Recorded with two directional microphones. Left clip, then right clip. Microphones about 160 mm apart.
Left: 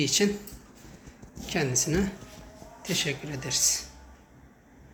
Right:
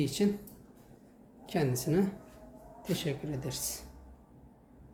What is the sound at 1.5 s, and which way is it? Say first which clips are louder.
Speech: left 4 dB; 15° right (ahead or behind).